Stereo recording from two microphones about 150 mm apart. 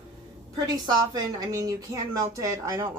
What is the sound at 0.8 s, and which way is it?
Speech, 25° right (ahead or behind).